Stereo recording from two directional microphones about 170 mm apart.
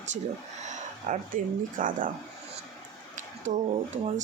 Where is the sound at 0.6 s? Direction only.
45° right (ahead or behind).